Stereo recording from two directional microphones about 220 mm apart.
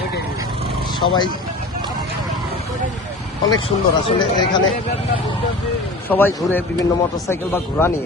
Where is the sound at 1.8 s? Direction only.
15° right (ahead or behind).